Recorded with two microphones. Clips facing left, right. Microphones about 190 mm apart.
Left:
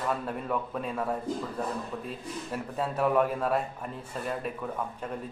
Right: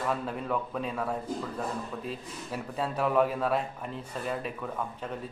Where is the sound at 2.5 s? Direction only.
Centre (ahead or behind).